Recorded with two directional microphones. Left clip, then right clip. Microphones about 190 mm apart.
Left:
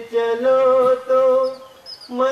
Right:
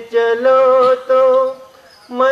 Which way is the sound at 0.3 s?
20° right (ahead or behind).